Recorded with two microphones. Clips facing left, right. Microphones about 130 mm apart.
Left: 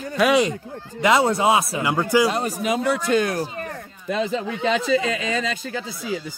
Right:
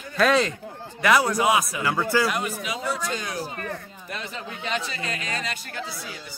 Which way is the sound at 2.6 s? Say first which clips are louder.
Left 7 dB; 55° left (ahead or behind).